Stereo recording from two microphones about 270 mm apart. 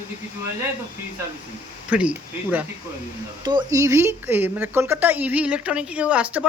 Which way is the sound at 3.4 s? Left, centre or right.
Centre.